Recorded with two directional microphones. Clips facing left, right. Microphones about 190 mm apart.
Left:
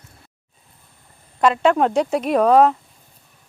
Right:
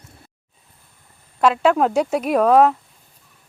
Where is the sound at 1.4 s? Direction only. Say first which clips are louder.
Even; 5° right (ahead or behind).